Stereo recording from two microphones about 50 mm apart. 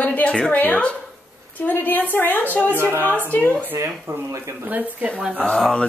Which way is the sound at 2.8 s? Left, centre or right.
Right.